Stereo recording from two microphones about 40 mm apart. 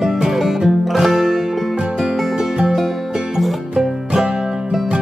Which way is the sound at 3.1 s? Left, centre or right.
Centre.